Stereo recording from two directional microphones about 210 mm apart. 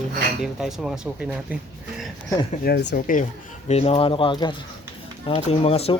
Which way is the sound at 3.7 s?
30° left (ahead or behind).